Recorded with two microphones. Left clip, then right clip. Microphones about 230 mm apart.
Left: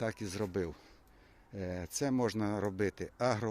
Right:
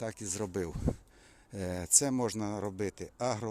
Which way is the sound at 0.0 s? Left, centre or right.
Centre.